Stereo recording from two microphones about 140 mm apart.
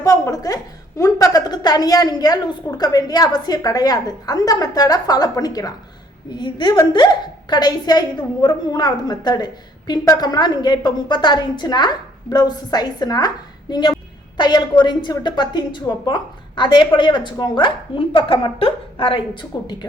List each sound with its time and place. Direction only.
0.0 s a woman's voice: 25° left (ahead or behind)